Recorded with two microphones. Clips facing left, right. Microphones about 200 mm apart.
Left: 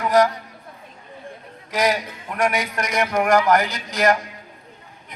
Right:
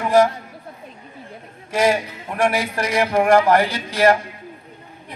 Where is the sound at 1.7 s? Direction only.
30° right (ahead or behind).